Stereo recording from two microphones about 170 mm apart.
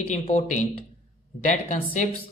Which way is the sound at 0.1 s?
45° left (ahead or behind).